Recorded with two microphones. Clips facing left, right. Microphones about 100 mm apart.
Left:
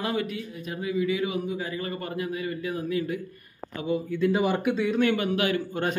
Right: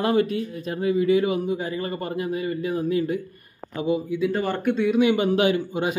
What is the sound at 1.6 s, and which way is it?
A man's voice, 30° right (ahead or behind).